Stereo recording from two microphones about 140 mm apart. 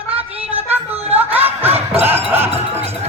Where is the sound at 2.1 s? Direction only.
15° right (ahead or behind).